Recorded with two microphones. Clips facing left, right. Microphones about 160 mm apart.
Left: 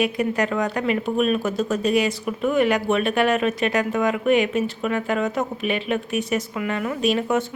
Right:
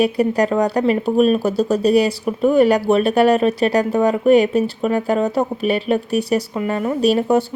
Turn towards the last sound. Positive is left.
turn(degrees=-35)  # may be behind; listen again after turning